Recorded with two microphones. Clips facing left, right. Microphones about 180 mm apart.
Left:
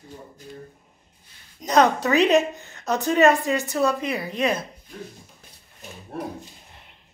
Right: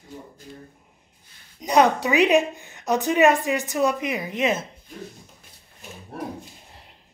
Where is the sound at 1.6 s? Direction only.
15° right (ahead or behind).